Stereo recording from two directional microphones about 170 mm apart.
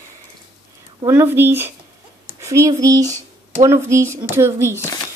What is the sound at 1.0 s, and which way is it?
Speech, 15° right (ahead or behind).